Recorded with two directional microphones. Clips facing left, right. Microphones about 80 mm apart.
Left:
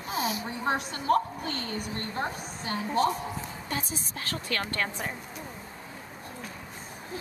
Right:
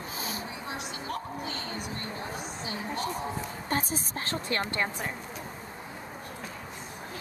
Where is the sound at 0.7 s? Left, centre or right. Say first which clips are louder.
Left 13 dB; left.